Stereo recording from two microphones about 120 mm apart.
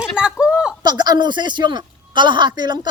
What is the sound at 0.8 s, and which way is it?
Speech, 35° right (ahead or behind).